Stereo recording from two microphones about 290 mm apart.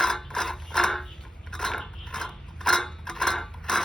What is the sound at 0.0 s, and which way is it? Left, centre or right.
Mechanisms, centre.